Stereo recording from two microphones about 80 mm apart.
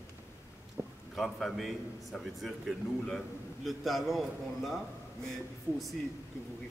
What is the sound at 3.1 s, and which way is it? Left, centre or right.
A man's voice, centre.